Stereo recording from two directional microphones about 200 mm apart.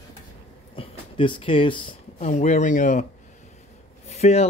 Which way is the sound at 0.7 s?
25° left (ahead or behind).